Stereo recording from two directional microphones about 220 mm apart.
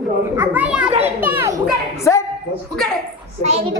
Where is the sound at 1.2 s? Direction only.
10° right (ahead or behind).